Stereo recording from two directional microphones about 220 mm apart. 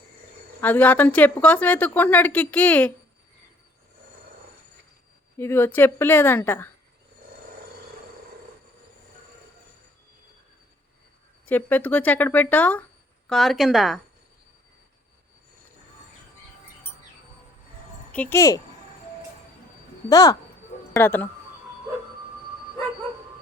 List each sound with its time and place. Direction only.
0.6 s a woman's voice: 10° left (ahead or behind)
5.4 s a woman's voice: 10° left (ahead or behind)
11.4 s a woman's voice: 10° left (ahead or behind)
18.1 s a woman's voice: 10° left (ahead or behind)
20.1 s a woman's voice: 15° left (ahead or behind)